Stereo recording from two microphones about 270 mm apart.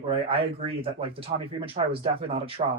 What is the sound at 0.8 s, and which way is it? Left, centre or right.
Speech, centre.